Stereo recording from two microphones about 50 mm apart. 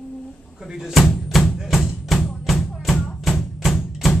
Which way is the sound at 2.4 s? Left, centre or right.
Centre.